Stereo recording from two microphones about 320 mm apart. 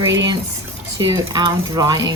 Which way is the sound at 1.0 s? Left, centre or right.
Centre.